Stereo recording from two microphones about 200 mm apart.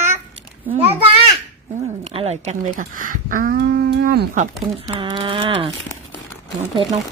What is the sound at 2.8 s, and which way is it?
Speech, 40° right (ahead or behind).